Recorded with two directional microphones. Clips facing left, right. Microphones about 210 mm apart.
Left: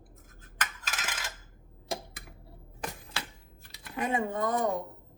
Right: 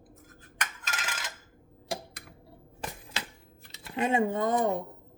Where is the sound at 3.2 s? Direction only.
20° right (ahead or behind).